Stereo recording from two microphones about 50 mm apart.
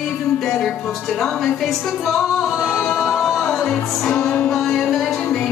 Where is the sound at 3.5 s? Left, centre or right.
Centre.